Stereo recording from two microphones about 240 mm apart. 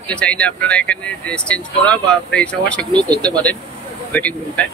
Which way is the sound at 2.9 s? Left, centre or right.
Centre.